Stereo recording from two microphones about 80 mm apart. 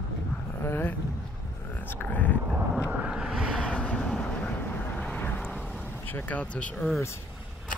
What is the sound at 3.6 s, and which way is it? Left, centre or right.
Vehicle, centre.